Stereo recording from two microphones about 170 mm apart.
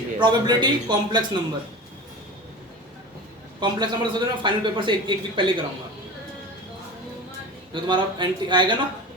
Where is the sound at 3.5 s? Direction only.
25° right (ahead or behind).